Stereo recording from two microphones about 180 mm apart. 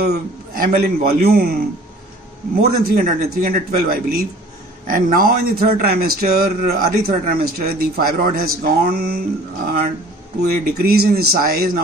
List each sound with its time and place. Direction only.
0.0 s a man's voice: 60° right (ahead or behind)
2.6 s speech: 55° right (ahead or behind)
10.5 s speech: 55° right (ahead or behind)